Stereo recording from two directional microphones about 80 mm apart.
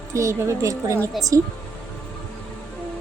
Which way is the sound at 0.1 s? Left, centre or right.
Right.